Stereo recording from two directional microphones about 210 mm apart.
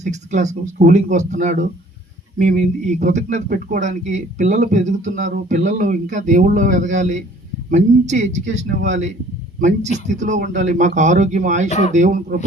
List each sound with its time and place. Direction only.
0.0 s speech: 35° right (ahead or behind)